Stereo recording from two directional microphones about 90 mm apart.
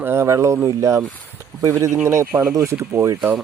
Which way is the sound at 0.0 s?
25° right (ahead or behind).